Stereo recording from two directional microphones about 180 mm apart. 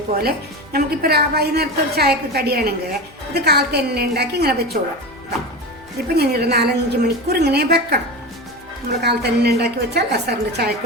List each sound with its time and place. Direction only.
0.1 s speech: 55° right (ahead or behind)
6.1 s speech: 65° right (ahead or behind)